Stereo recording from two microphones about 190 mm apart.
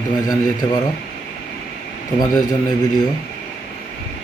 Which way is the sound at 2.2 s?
20° left (ahead or behind).